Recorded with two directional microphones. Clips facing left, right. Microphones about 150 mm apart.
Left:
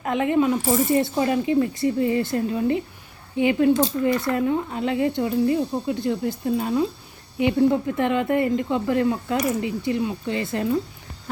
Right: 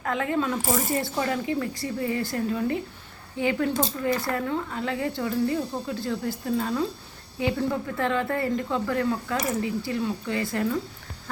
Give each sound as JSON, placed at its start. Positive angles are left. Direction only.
{"t": 0.0, "sound": "speech", "side_deg": 20}